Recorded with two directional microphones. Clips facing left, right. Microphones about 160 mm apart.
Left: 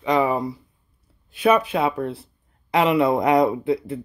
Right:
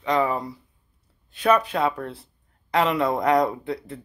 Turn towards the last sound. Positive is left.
turn(degrees=10)  # may be behind; listen again after turning